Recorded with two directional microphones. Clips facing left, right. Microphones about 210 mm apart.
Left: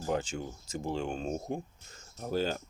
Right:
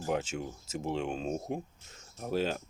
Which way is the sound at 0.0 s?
5° right (ahead or behind).